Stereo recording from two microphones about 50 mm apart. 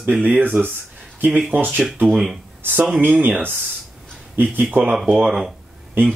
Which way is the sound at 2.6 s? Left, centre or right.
Right.